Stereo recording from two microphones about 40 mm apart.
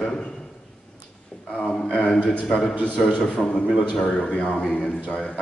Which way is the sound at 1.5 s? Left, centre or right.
Centre.